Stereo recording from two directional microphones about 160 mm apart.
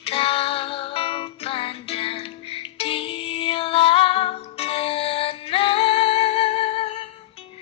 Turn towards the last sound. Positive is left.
turn(degrees=35)  # may be behind; listen again after turning